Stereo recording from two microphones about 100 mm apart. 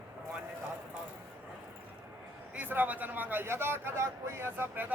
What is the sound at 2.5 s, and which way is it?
A man's voice, 20° right (ahead or behind).